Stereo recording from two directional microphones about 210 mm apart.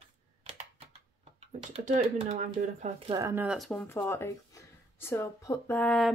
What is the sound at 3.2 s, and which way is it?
Speech, 10° right (ahead or behind).